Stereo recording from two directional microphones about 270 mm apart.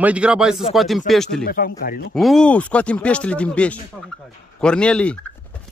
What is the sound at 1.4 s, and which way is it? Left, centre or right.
Speech, left.